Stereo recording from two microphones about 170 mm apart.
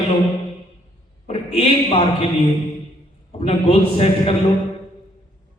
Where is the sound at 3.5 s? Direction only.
35° left (ahead or behind).